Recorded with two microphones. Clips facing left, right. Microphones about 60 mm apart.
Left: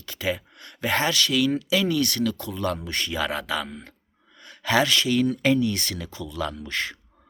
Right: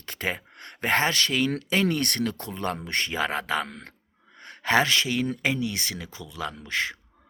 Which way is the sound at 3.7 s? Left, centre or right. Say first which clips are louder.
Left 2 dB; right.